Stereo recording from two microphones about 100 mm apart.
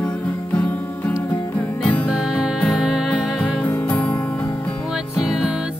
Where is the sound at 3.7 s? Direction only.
15° left (ahead or behind).